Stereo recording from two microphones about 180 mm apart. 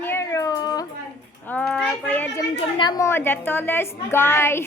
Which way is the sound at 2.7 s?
20° left (ahead or behind).